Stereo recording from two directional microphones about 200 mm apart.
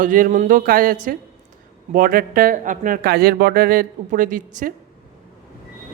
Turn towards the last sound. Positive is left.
turn(degrees=-40)  # may be behind; listen again after turning